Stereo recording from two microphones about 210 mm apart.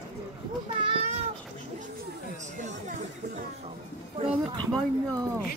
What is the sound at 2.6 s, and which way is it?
Chatter, 35° right (ahead or behind).